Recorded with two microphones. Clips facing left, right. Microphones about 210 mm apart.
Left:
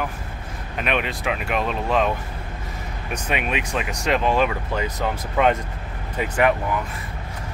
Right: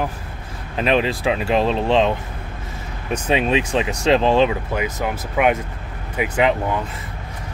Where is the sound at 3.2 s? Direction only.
30° right (ahead or behind).